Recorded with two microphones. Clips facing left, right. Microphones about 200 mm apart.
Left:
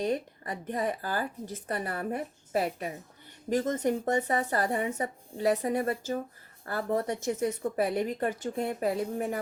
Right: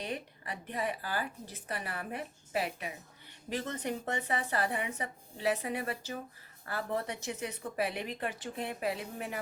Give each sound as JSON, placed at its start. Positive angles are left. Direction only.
{"t": 0.0, "sound": "a woman's voice", "side_deg": 45}